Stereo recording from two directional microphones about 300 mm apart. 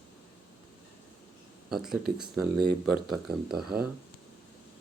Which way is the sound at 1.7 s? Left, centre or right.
Centre.